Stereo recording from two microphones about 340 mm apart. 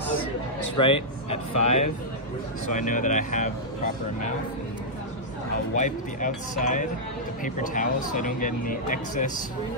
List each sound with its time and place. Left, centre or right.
0.7 s speech: centre
5.8 s speech: left